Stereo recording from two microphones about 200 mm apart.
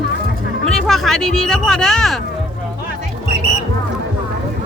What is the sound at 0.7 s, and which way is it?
Speech, centre (ahead or behind).